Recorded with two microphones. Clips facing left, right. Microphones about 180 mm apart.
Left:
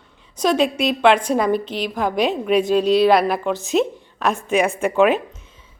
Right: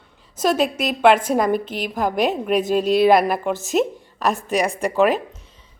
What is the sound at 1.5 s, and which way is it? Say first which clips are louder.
A woman's voice: left 1 dB; 50° right (ahead or behind).